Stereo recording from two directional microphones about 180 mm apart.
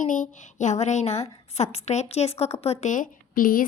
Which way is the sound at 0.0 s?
45° left (ahead or behind).